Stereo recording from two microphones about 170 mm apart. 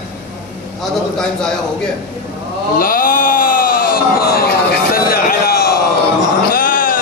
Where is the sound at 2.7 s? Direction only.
55° left (ahead or behind).